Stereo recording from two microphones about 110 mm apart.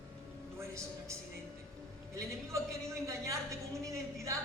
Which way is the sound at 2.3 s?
25° right (ahead or behind).